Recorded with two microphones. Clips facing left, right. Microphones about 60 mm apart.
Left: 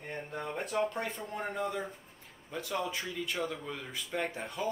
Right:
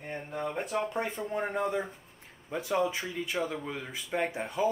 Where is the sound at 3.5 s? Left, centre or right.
Centre.